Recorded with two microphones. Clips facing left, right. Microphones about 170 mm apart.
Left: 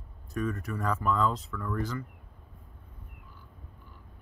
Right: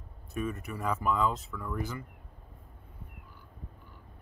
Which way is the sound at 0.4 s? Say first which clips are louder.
Left 2 dB; 10° right (ahead or behind).